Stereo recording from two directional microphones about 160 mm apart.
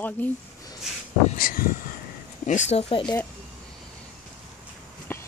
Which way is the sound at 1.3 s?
65° left (ahead or behind).